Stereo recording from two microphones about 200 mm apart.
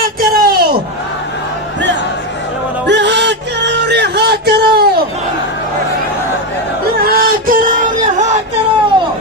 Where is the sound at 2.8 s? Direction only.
60° right (ahead or behind).